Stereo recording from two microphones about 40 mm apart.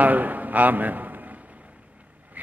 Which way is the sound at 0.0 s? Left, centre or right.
Right.